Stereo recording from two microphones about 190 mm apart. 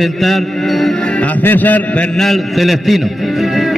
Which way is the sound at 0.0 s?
Centre (ahead or behind).